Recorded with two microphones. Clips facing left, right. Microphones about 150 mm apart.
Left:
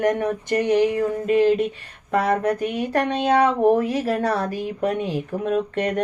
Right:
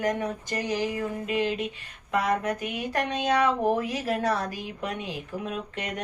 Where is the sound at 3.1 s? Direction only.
55° left (ahead or behind).